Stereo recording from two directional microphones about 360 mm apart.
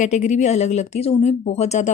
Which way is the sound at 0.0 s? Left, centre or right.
Centre.